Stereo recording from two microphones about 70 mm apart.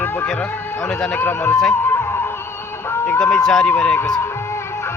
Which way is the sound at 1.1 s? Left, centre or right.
Left.